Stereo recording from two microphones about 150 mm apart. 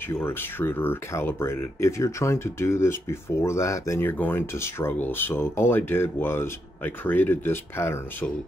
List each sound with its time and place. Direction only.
0.1 s speech: 15° left (ahead or behind)